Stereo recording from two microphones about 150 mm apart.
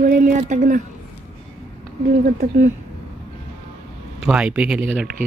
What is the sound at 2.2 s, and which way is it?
Speech, 70° right (ahead or behind).